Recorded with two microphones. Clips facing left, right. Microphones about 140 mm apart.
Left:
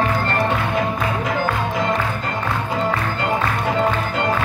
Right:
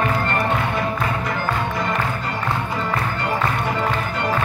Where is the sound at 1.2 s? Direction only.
90° left.